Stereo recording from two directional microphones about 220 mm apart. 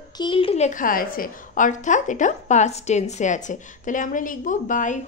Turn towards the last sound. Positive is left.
turn(degrees=35)  # may be behind; listen again after turning